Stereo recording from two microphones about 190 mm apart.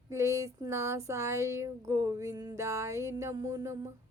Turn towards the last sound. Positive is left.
turn(degrees=-15)  # may be behind; listen again after turning